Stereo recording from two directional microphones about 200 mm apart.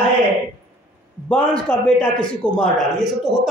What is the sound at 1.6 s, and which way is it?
A woman's voice, 5° left (ahead or behind).